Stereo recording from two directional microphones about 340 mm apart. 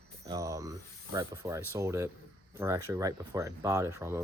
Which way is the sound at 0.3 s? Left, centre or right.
Centre.